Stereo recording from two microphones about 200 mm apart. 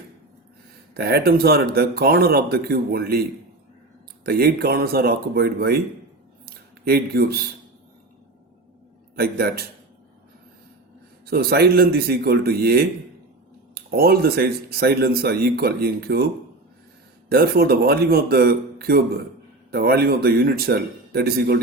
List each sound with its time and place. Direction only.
0.9 s speech: 55° right (ahead or behind)
4.3 s speech: 50° right (ahead or behind)
6.4 s a sound: 50° right (ahead or behind)
9.1 s speech: 50° right (ahead or behind)
11.3 s speech: 50° right (ahead or behind)
17.2 s speech: 50° right (ahead or behind)